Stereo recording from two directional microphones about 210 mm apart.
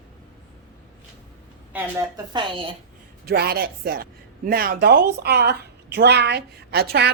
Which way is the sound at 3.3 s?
45° right (ahead or behind).